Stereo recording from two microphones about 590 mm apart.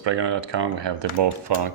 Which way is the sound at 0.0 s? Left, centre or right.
Right.